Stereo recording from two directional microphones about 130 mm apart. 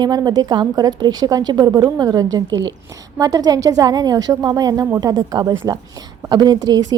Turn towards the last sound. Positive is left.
turn(degrees=-30)  # may be behind; listen again after turning